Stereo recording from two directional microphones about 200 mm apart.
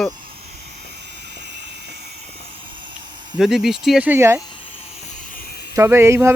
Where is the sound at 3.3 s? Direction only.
Centre (ahead or behind).